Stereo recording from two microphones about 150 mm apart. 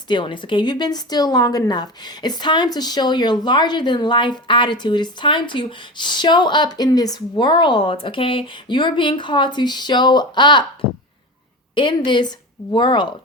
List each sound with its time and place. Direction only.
0.1 s speech: 30° left (ahead or behind)